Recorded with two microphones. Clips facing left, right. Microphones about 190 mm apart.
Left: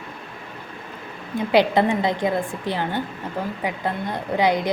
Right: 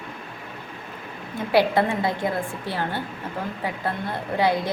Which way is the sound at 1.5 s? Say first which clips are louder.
Left 2 dB; 20° left (ahead or behind).